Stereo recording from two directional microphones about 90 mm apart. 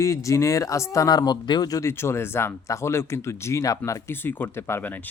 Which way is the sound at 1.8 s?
30° left (ahead or behind).